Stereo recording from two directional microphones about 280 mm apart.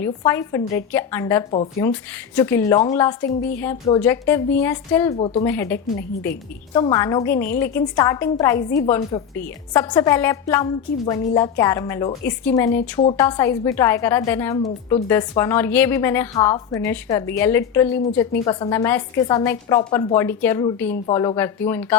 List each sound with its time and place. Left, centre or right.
0.0 s a woman's voice: centre
5.1 s a woman's voice: left
5.5 s a woman's voice: centre